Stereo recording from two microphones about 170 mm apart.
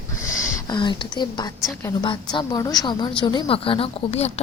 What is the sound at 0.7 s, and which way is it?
A woman's voice, 25° left (ahead or behind).